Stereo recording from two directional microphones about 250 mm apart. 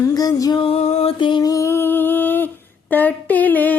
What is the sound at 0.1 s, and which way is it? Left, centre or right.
Music, centre.